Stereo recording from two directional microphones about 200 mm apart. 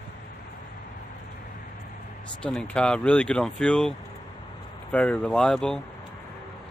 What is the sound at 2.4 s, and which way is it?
Speech, 5° left (ahead or behind).